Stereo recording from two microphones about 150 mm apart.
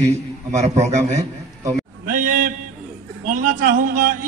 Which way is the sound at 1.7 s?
65° right (ahead or behind).